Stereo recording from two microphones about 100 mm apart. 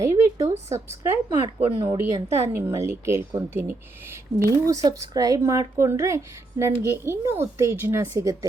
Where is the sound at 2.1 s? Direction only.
25° right (ahead or behind).